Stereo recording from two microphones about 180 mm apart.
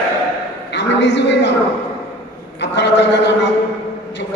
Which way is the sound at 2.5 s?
75° left (ahead or behind).